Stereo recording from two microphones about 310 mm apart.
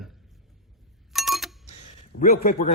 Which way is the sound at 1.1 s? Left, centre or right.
Centre.